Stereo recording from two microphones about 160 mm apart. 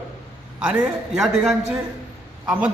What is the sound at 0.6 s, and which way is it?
A man's voice, 5° right (ahead or behind).